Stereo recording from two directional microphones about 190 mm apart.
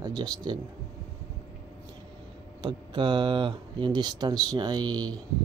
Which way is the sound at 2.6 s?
25° right (ahead or behind).